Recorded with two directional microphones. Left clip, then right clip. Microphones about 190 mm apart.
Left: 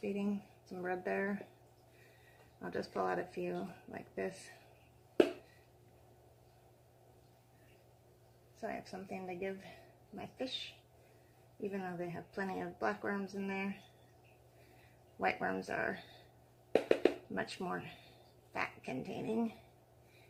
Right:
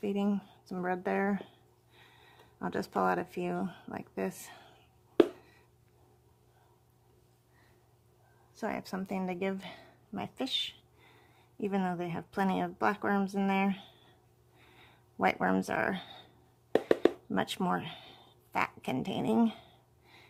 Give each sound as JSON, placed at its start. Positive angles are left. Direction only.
{"t": 0.0, "sound": "speech", "side_deg": -45}
{"t": 2.6, "sound": "speech", "side_deg": -45}
{"t": 8.6, "sound": "speech", "side_deg": -55}
{"t": 11.7, "sound": "speech", "side_deg": -50}
{"t": 15.2, "sound": "speech", "side_deg": -45}
{"t": 17.3, "sound": "speech", "side_deg": -50}